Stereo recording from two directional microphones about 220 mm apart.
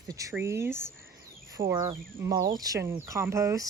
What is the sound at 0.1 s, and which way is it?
Speech, 15° right (ahead or behind).